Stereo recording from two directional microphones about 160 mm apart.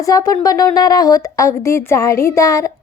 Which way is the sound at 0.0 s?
20° left (ahead or behind).